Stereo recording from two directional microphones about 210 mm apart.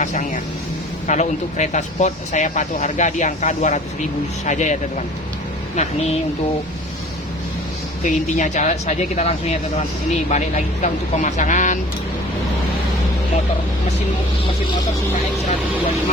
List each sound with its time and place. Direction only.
0.0 s speech: 35° left (ahead or behind)
8.0 s speech: 35° left (ahead or behind)